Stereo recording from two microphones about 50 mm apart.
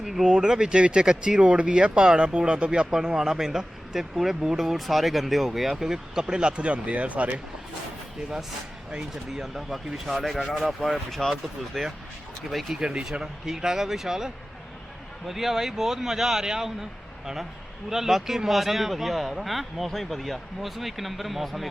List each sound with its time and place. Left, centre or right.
0.0 s speech: centre
0.3 s speech: centre
8.9 s speech: centre
9.4 s speech: centre
12.8 s speech: centre
17.8 s speech: centre